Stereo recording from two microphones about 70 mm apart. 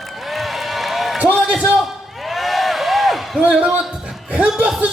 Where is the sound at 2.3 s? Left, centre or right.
Centre.